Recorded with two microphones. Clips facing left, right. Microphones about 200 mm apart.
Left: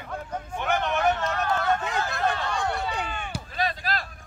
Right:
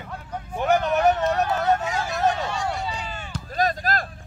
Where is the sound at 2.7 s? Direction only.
55° left (ahead or behind).